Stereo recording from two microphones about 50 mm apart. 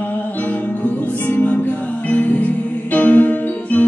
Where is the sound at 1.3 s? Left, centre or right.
Left.